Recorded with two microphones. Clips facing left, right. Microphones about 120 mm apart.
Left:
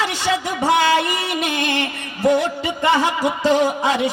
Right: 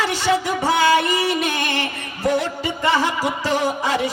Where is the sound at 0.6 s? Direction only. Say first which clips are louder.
Left 1 dB; 25° left (ahead or behind).